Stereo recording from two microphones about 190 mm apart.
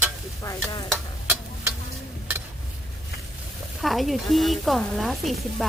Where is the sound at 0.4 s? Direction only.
20° left (ahead or behind).